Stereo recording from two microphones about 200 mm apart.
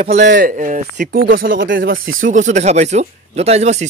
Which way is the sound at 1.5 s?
70° right (ahead or behind).